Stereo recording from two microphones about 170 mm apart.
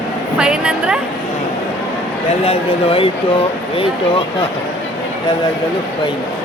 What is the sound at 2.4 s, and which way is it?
Speech, 35° left (ahead or behind).